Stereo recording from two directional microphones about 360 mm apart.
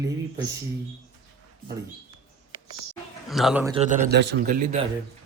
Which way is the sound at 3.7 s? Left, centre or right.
Right.